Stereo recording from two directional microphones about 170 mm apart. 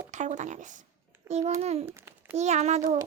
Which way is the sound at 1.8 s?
15° right (ahead or behind).